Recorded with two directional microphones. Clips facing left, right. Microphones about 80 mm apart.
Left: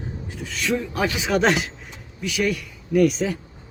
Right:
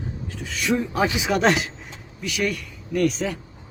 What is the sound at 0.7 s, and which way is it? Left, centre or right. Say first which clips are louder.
Speech: right 2 dB; centre.